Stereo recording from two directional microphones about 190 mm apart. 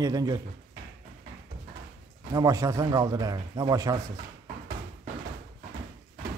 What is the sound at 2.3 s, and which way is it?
A man's voice, 15° right (ahead or behind).